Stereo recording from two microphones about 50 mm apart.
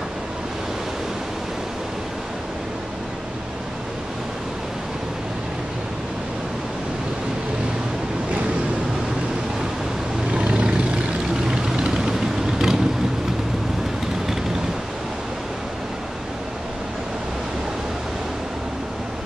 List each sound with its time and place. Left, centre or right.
10.3 s vehicle: right
11.6 s vehicle: centre